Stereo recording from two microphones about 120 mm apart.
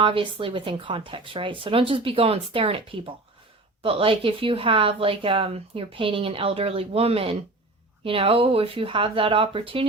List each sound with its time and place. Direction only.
0.0 s speech: 45° right (ahead or behind)